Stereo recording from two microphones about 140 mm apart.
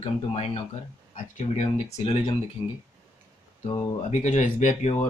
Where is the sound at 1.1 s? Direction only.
60° left (ahead or behind).